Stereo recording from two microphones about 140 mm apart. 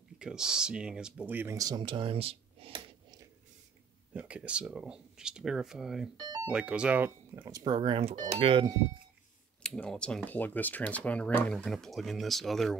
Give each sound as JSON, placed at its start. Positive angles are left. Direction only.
{"t": 0.2, "sound": "speech", "side_deg": -5}
{"t": 1.6, "sound": "speech", "side_deg": -30}
{"t": 4.1, "sound": "speech", "side_deg": -10}
{"t": 9.6, "sound": "speech", "side_deg": 5}